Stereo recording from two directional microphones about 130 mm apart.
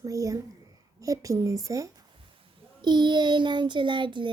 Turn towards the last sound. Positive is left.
turn(degrees=-40)  # may be behind; listen again after turning